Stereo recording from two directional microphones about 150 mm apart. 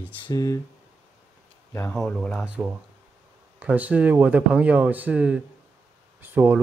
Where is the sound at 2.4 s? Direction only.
10° right (ahead or behind).